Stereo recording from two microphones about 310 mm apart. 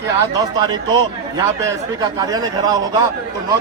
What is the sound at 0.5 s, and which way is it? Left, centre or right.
A man's voice, centre.